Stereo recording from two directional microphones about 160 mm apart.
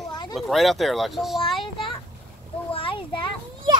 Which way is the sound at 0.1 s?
30° left (ahead or behind).